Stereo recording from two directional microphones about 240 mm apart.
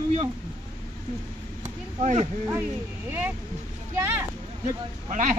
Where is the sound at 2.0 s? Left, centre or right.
Right.